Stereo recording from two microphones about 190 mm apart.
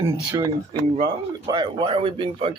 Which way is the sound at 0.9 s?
25° right (ahead or behind).